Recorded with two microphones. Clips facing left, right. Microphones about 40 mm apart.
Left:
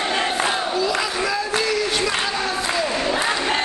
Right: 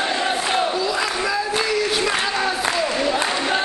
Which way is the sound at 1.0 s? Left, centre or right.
Centre.